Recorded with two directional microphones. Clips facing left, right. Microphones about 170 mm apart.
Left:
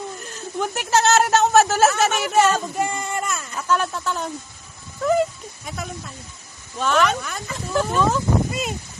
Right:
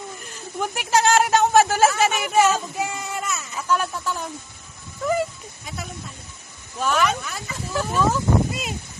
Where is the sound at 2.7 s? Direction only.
50° left (ahead or behind).